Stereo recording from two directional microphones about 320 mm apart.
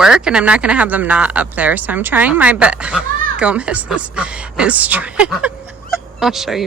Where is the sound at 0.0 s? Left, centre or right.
Centre.